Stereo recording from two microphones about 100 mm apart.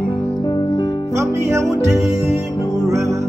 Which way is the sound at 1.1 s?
30° right (ahead or behind).